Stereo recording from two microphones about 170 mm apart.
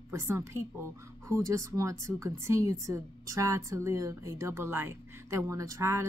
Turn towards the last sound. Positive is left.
turn(degrees=-15)  # may be behind; listen again after turning